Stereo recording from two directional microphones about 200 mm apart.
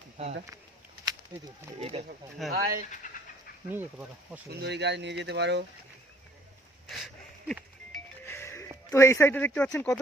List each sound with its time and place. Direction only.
0.2 s speech: 35° right (ahead or behind)
1.3 s speech: 20° right (ahead or behind)
1.8 s speech: 30° right (ahead or behind)
2.5 s speech: 45° right (ahead or behind)
3.0 s dog: 40° left (ahead or behind)
3.7 s speech: 10° right (ahead or behind)
4.6 s speech: 55° right (ahead or behind)
6.8 s music: centre (ahead or behind)
8.9 s speech: 15° left (ahead or behind)